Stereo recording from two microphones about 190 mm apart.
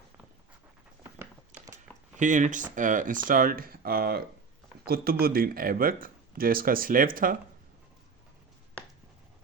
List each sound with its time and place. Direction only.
2.1 s speech: 40° right (ahead or behind)
5.2 s speech: 50° right (ahead or behind)